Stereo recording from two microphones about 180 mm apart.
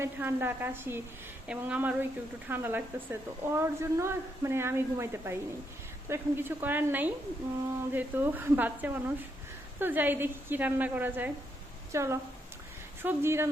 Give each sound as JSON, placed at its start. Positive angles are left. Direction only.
{"t": 0.0, "sound": "a woman's voice", "side_deg": -15}